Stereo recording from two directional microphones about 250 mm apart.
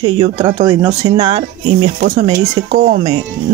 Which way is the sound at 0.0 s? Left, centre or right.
Centre.